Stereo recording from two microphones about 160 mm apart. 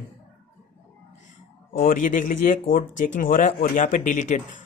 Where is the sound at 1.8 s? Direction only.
60° left (ahead or behind).